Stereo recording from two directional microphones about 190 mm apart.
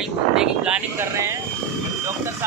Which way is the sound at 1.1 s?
15° right (ahead or behind).